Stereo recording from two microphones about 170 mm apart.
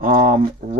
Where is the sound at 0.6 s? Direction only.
35° right (ahead or behind).